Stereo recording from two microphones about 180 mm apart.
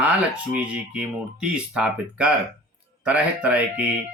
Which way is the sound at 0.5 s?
5° right (ahead or behind).